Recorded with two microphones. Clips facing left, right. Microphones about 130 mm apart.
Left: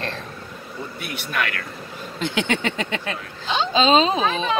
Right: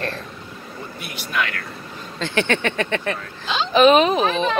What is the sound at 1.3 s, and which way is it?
Speech, 50° left (ahead or behind).